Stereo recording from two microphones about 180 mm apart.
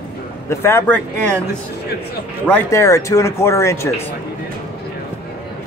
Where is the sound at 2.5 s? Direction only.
15° left (ahead or behind).